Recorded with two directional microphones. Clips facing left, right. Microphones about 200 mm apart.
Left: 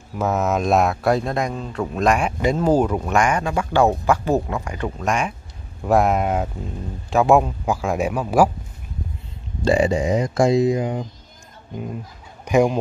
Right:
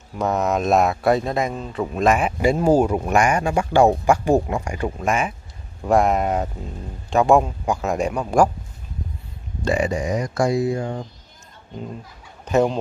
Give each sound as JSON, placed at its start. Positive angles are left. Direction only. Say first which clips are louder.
{"t": 0.1, "sound": "speech", "louder": "even", "side_deg": 5}
{"t": 9.7, "sound": "speech", "louder": "left 4 dB", "side_deg": 25}
{"t": 12.4, "sound": "speech", "louder": "left 1 dB", "side_deg": 10}